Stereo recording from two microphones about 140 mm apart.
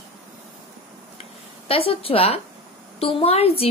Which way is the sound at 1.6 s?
40° left (ahead or behind).